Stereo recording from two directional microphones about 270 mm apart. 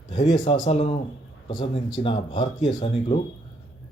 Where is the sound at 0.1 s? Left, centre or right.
Centre.